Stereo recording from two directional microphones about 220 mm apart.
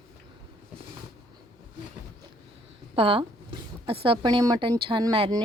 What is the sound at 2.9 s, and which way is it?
A woman's voice, 25° right (ahead or behind).